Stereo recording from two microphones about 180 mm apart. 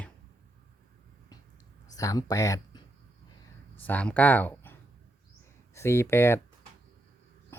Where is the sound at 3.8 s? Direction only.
10° left (ahead or behind).